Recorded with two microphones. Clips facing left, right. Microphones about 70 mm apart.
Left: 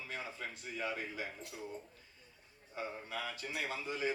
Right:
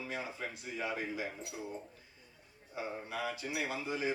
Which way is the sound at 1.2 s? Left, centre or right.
Right.